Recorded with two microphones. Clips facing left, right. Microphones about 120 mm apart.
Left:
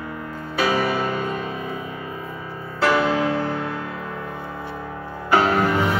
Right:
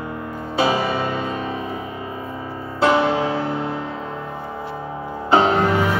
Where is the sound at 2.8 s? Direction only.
25° right (ahead or behind).